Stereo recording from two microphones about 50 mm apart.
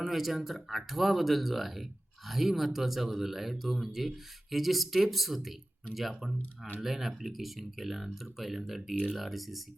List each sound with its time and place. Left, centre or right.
0.0 s speech: centre